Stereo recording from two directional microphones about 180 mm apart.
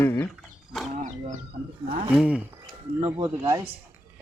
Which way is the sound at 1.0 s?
45° right (ahead or behind).